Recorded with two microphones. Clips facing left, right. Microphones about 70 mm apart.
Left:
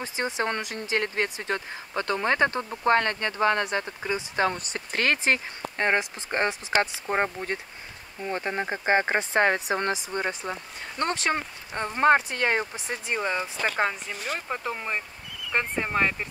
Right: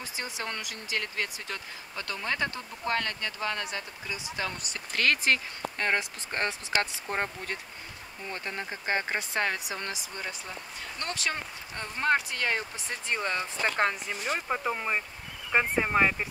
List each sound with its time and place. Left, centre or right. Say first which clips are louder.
0.0 s speech: left 8 dB; left
12.8 s speech: left 3 dB; centre
13.7 s speech: left 1 dB; centre